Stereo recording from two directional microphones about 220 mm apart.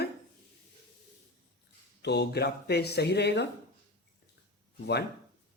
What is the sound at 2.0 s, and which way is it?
Speech, 50° left (ahead or behind).